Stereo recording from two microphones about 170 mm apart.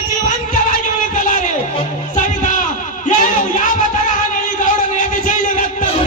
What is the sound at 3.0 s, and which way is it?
Music, 45° left (ahead or behind).